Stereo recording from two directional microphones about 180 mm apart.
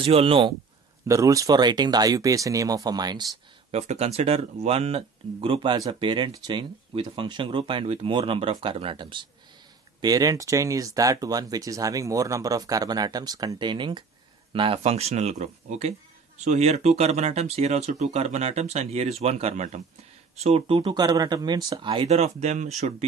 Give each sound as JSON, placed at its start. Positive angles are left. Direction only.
{"t": 0.0, "sound": "speech", "side_deg": -30}
{"t": 1.0, "sound": "speech", "side_deg": -20}
{"t": 3.7, "sound": "speech", "side_deg": -35}